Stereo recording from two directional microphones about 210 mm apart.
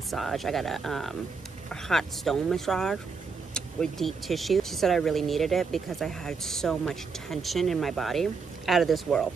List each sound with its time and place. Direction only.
0.1 s speech: centre (ahead or behind)